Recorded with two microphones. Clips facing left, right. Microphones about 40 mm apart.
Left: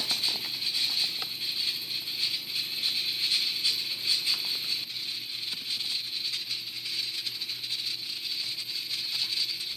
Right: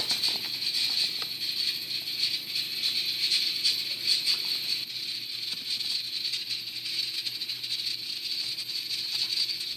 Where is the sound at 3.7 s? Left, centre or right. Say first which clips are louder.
Even; left.